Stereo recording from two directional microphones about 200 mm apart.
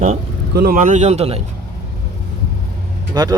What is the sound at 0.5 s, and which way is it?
Speech, 50° right (ahead or behind).